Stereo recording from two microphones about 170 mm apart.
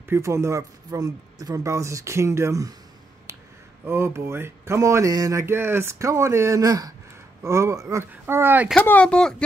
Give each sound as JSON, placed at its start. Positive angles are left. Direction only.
{"t": 0.1, "sound": "speech", "side_deg": -15}
{"t": 3.8, "sound": "speech", "side_deg": -15}
{"t": 8.8, "sound": "speech", "side_deg": 5}